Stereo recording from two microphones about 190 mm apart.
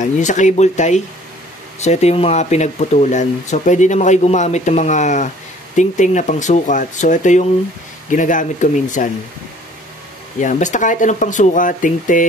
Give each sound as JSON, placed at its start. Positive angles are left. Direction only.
{"t": 0.0, "sound": "speech", "side_deg": 40}
{"t": 10.4, "sound": "speech", "side_deg": 40}